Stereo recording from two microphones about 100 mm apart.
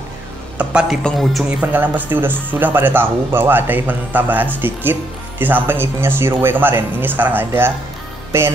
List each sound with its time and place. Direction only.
0.6 s speech: 10° right (ahead or behind)
1.0 s a man's voice: centre (ahead or behind)
1.6 s speech: 15° right (ahead or behind)